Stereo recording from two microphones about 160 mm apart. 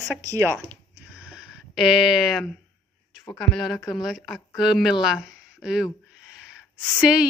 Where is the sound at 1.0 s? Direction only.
5° right (ahead or behind).